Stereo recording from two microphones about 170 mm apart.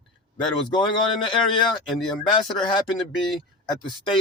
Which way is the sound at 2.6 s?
30° left (ahead or behind).